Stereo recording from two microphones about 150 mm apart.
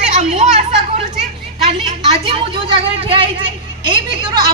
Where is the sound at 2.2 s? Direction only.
35° right (ahead or behind).